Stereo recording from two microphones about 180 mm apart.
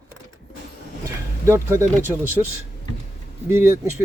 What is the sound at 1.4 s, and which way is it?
Speech, 15° right (ahead or behind).